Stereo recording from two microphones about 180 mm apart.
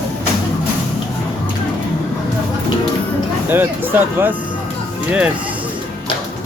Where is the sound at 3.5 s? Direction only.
10° right (ahead or behind).